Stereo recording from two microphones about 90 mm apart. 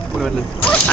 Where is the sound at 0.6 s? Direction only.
15° left (ahead or behind).